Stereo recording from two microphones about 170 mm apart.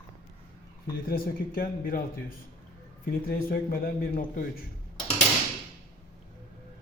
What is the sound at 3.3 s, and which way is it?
A man's voice, 60° left (ahead or behind).